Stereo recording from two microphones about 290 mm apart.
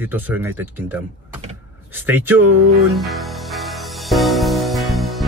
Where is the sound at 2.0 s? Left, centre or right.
Centre.